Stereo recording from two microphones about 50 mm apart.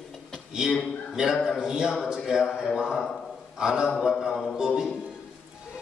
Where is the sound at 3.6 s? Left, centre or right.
Centre.